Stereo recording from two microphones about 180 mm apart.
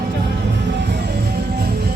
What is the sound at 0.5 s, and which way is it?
Music, 75° right (ahead or behind).